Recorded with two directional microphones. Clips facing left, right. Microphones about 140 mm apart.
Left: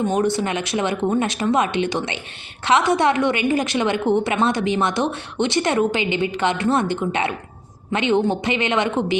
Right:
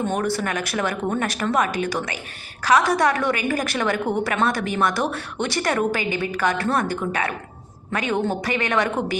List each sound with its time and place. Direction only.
0.1 s a woman's voice: 20° left (ahead or behind)